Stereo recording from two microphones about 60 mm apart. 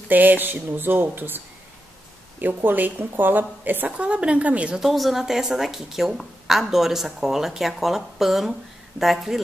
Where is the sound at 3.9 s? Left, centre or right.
Centre.